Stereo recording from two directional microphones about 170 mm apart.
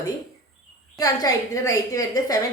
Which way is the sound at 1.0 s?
20° left (ahead or behind).